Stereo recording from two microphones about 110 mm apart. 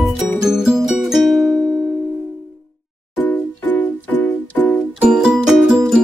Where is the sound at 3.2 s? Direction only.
15° left (ahead or behind).